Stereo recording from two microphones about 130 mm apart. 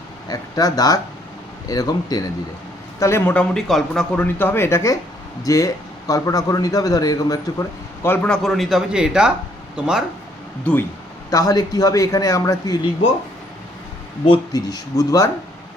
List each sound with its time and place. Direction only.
0.3 s a man's voice: 30° left (ahead or behind)
3.3 s a man's voice: centre (ahead or behind); by 7.3 s 25° left (ahead or behind)
8.0 s speech: 15° left (ahead or behind)
8.3 s speech: centre (ahead or behind)
11.3 s a man's voice: 30° left (ahead or behind)
14.3 s a man's voice: 30° left (ahead or behind)